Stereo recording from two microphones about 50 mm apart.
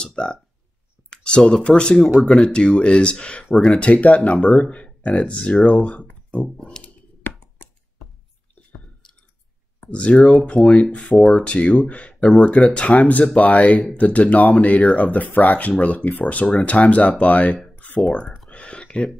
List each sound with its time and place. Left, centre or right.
0.0 s a sound: centre
1.5 s speech: centre
2.0 s speech: centre
2.4 s speech: centre
3.5 s speech: centre
3.8 s speech: left
4.4 s speech: centre
6.8 s a sound: left
9.8 s speech: left
11.1 s speech: centre
11.4 s speech: left
18.5 s a sound: left